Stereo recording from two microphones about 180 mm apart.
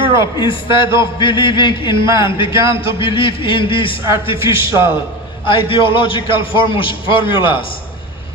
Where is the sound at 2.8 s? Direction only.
30° left (ahead or behind).